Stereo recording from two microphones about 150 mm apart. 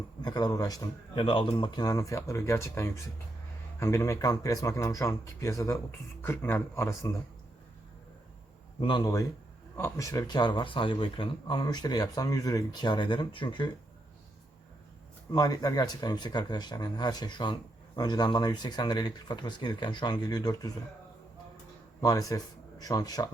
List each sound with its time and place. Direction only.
0.2 s a man's voice: 25° left (ahead or behind)
8.8 s speech: 30° left (ahead or behind)
15.3 s speech: 25° left (ahead or behind)
22.0 s speech: 25° left (ahead or behind)